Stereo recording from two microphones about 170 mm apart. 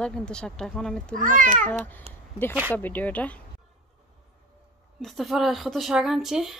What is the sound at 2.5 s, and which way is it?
Speech, 10° right (ahead or behind).